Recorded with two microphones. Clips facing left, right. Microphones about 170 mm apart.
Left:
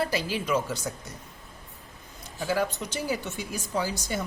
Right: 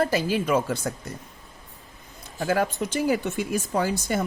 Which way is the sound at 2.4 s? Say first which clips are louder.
Right 4 dB; 50° right (ahead or behind).